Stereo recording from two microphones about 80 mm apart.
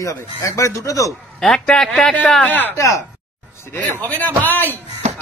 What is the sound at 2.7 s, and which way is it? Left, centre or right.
Speech, left.